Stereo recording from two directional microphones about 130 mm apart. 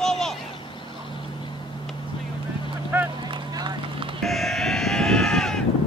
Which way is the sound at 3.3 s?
40° right (ahead or behind).